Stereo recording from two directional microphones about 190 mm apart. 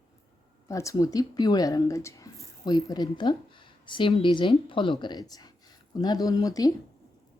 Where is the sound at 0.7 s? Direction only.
15° left (ahead or behind).